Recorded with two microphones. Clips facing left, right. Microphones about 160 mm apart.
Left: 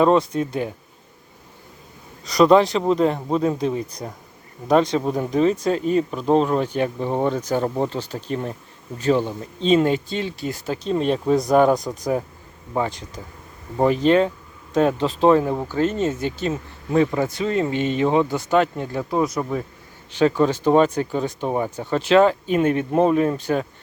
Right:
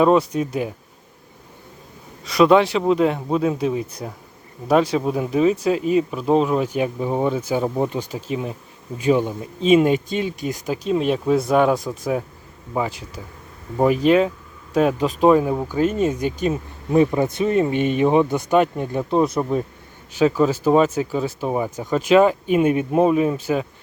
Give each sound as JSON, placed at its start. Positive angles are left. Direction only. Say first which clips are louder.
{"t": 0.0, "sound": "speech", "louder": "right 1 dB", "side_deg": -10}
{"t": 2.2, "sound": "speech", "louder": "even", "side_deg": 0}
{"t": 10.9, "sound": "speech", "louder": "even", "side_deg": -5}
{"t": 20.1, "sound": "speech", "louder": "right 1 dB", "side_deg": -5}